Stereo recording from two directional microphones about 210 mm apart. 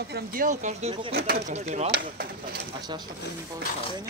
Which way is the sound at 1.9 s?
45° right (ahead or behind).